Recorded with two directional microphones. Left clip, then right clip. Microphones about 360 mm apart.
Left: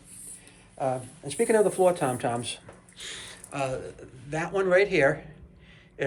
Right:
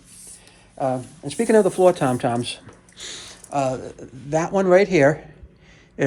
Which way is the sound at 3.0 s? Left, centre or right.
Centre.